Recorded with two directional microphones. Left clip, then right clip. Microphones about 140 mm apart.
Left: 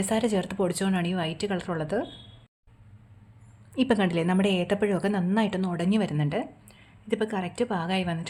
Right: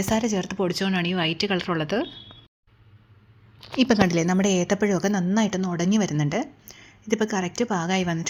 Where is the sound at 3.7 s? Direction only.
15° right (ahead or behind).